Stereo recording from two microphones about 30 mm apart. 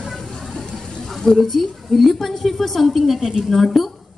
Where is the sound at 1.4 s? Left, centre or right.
Centre.